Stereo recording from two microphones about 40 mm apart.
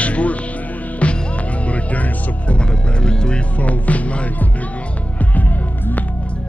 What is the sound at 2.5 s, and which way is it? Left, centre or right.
Speech, left.